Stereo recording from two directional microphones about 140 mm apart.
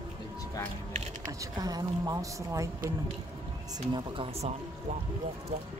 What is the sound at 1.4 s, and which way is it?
A woman's voice, 25° right (ahead or behind).